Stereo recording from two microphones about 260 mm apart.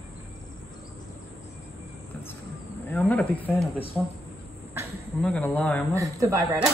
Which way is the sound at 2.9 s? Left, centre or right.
Centre.